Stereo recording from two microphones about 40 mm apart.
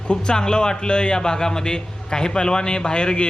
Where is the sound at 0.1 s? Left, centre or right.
Left.